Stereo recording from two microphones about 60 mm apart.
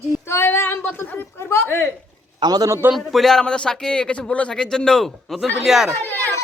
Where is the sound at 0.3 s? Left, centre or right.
Left.